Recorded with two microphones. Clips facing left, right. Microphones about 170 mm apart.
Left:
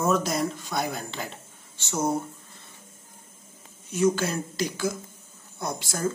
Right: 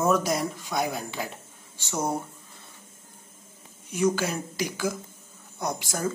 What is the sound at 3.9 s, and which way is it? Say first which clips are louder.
Speech: left 1 dB; 15° right (ahead or behind).